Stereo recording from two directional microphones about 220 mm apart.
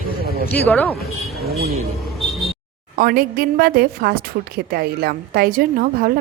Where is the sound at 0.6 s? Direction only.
5° left (ahead or behind).